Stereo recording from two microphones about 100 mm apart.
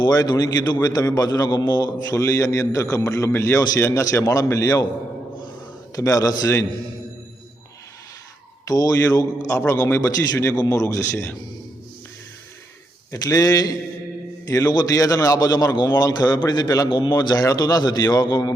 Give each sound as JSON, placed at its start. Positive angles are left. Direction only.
{"t": 0.0, "sound": "a man's voice", "side_deg": 45}
{"t": 2.1, "sound": "a man's voice", "side_deg": 30}
{"t": 6.0, "sound": "a man's voice", "side_deg": 35}
{"t": 8.6, "sound": "a man's voice", "side_deg": 40}
{"t": 13.1, "sound": "a man's voice", "side_deg": 35}